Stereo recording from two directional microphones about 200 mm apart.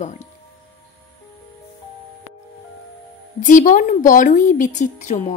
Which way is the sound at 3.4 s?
40° left (ahead or behind).